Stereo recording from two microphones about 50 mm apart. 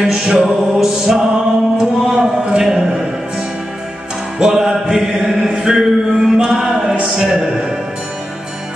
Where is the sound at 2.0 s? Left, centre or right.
Centre.